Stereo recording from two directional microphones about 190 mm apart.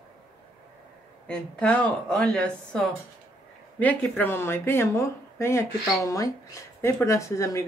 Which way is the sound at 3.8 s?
10° left (ahead or behind).